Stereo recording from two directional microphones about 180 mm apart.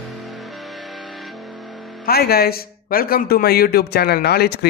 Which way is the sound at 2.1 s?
60° left (ahead or behind).